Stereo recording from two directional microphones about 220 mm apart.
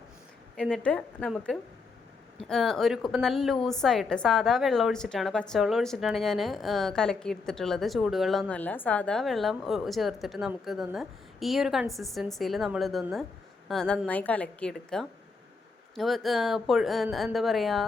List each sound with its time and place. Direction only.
0.5 s a woman's voice: 5° left (ahead or behind)